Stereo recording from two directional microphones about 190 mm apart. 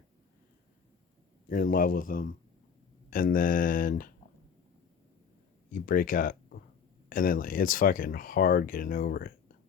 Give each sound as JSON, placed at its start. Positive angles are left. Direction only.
{"t": 1.5, "sound": "speech", "side_deg": 45}
{"t": 5.7, "sound": "speech", "side_deg": 50}